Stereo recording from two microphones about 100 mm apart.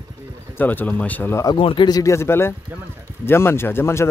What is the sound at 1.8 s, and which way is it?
Speech, 35° left (ahead or behind).